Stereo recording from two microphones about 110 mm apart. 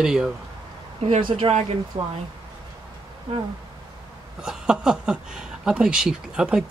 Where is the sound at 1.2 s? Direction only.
50° right (ahead or behind).